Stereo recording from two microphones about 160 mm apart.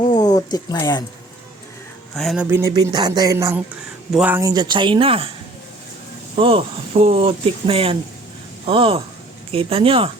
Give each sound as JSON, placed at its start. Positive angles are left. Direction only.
{"t": 0.1, "sound": "a sound", "side_deg": 25}
{"t": 2.1, "sound": "speech", "side_deg": 0}
{"t": 4.4, "sound": "speech", "side_deg": -25}
{"t": 6.3, "sound": "speech", "side_deg": -35}